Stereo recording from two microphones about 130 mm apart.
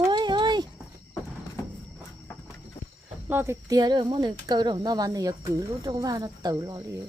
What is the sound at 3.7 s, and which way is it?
Speech, 30° right (ahead or behind).